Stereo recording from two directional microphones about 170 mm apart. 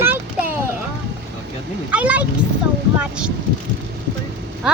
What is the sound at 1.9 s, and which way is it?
Speech, 10° right (ahead or behind).